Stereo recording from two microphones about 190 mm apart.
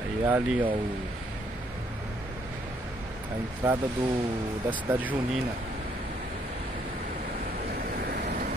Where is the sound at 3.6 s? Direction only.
10° right (ahead or behind).